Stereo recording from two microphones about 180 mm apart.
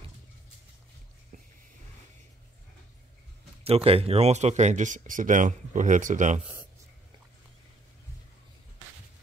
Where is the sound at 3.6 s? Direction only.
30° right (ahead or behind).